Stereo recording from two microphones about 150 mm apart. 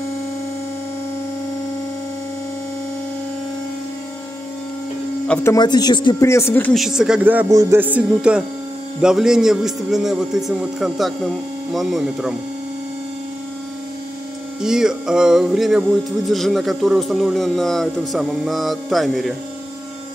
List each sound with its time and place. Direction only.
5.3 s speech: 15° left (ahead or behind)
5.6 s speech: 30° left (ahead or behind)
6.2 s speech: 15° left (ahead or behind)
6.7 s a man's voice: centre (ahead or behind)
7.4 s a man's voice: 25° right (ahead or behind)
7.8 s a man's voice: 10° right (ahead or behind)
14.6 s a man's voice: 5° right (ahead or behind)